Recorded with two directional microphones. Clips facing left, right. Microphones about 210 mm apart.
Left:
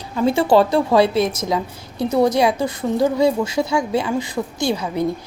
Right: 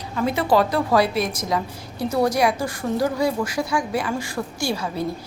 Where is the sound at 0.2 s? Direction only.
30° left (ahead or behind).